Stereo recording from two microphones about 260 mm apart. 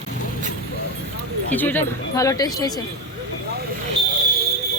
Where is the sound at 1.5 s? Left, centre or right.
Centre.